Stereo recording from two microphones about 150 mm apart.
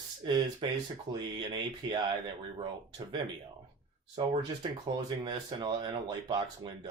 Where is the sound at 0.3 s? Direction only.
30° right (ahead or behind).